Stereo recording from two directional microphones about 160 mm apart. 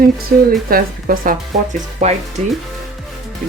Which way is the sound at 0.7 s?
65° right (ahead or behind).